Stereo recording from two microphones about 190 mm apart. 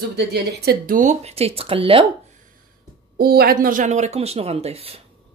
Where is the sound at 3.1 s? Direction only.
55° right (ahead or behind); by 5.0 s 30° right (ahead or behind).